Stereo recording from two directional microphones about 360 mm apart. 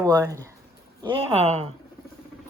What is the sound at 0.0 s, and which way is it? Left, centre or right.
Speech, centre.